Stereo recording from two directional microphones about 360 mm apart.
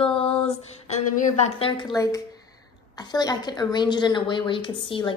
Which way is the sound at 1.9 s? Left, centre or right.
Centre.